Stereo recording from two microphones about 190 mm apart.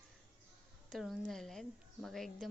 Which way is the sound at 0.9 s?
Centre (ahead or behind).